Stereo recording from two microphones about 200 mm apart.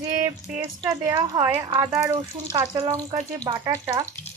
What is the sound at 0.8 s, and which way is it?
Speech, 15° right (ahead or behind).